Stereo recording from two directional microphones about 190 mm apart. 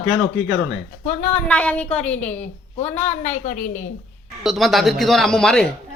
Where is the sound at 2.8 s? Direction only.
35° left (ahead or behind).